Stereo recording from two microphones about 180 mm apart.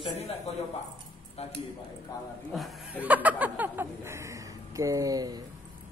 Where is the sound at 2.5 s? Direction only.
Centre (ahead or behind); by 5.4 s 20° right (ahead or behind).